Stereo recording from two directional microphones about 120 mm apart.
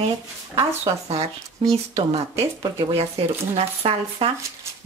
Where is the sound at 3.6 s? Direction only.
55° right (ahead or behind).